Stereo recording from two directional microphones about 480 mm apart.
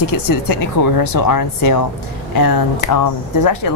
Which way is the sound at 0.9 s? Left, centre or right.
Left.